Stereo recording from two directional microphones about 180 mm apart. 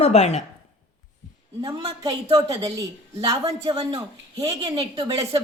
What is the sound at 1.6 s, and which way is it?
Speech, 25° right (ahead or behind).